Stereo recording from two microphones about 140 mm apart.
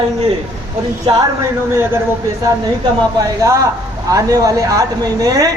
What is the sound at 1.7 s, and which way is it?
Speech, 15° right (ahead or behind).